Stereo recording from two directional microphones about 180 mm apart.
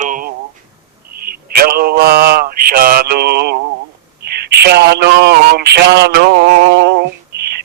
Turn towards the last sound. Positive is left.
turn(degrees=-65)  # may be behind; listen again after turning